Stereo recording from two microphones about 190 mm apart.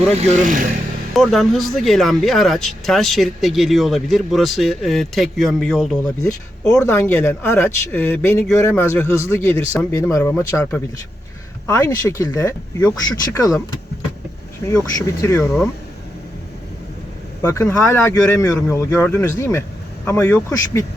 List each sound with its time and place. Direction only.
0.1 s speech: 35° right (ahead or behind)
1.1 s speech: centre (ahead or behind); by 13.6 s 20° left (ahead or behind)
14.9 s speech: 15° left (ahead or behind)
17.4 s speech: 15° left (ahead or behind)